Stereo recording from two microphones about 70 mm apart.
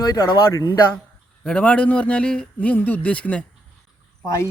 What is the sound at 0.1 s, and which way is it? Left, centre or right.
Speech, left.